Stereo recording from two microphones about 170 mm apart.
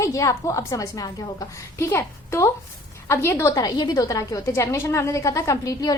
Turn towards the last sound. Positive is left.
turn(degrees=20)  # may be behind; listen again after turning